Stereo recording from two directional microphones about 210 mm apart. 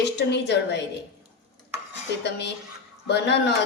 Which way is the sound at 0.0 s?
55° left (ahead or behind).